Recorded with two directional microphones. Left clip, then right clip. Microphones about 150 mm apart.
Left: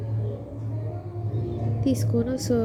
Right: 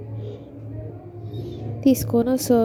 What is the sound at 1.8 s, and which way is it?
Speech, 45° right (ahead or behind).